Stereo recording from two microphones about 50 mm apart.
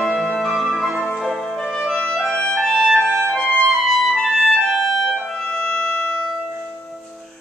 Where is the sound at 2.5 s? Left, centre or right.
Centre.